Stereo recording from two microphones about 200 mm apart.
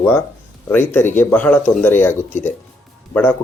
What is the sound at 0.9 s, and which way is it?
Speech, 10° left (ahead or behind).